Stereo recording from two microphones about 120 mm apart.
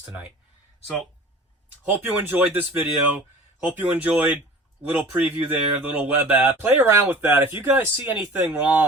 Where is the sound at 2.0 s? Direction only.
15° right (ahead or behind).